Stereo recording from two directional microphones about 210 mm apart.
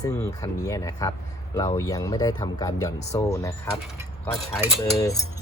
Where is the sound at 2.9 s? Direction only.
30° left (ahead or behind).